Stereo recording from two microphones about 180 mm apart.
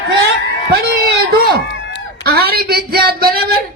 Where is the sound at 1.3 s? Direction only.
60° right (ahead or behind).